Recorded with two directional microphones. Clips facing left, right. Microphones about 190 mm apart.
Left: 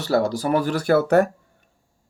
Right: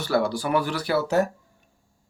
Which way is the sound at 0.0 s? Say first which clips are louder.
Left 3 dB; 40° left (ahead or behind).